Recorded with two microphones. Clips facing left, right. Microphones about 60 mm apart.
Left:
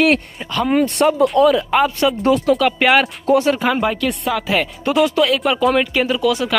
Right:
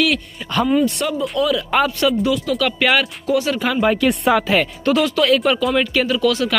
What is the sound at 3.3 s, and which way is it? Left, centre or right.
Speech, left.